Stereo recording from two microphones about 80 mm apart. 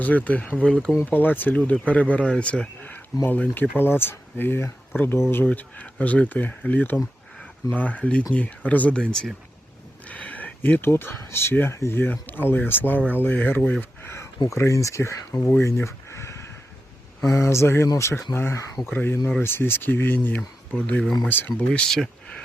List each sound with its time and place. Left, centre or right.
0.0 s speech: centre
5.5 s speech: centre
10.1 s speech: centre
14.0 s a sound: left
14.4 s speech: left
15.6 s a sound: left
17.2 s speech: left
21.7 s speech: centre